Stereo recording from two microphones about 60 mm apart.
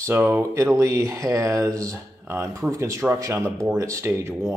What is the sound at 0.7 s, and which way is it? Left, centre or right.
Speech, right.